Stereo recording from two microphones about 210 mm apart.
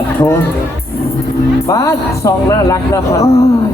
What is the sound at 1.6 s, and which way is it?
Speech, 15° left (ahead or behind).